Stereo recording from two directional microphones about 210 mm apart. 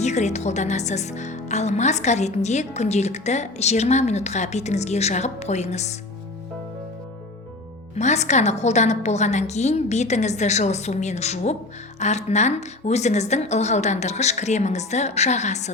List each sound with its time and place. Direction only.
0.0 s a woman's voice: 35° left (ahead or behind)
7.9 s a woman's voice: 35° left (ahead or behind)